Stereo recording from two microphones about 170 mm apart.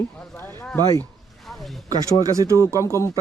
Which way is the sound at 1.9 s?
20° right (ahead or behind).